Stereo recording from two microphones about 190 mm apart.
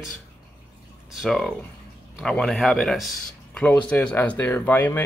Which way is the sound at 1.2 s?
Centre (ahead or behind).